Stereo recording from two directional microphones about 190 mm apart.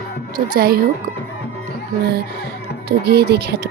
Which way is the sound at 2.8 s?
55° right (ahead or behind).